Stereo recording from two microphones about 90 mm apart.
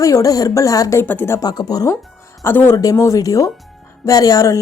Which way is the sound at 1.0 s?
25° left (ahead or behind).